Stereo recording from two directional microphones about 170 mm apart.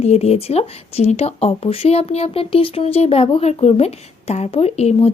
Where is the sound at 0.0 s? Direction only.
40° left (ahead or behind).